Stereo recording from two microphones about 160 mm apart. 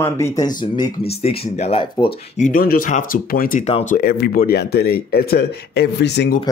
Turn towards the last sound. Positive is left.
turn(degrees=90)